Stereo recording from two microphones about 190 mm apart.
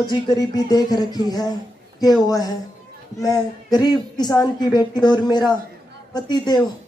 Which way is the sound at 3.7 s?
20° left (ahead or behind).